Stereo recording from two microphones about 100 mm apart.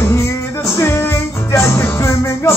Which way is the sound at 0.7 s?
25° left (ahead or behind).